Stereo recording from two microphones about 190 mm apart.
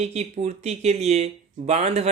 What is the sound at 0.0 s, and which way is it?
Speech, 35° right (ahead or behind).